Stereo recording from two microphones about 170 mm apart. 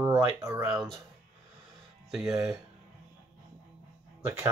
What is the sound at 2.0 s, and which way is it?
Speech, centre (ahead or behind).